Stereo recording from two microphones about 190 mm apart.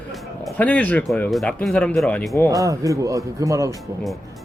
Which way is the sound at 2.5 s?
15° right (ahead or behind).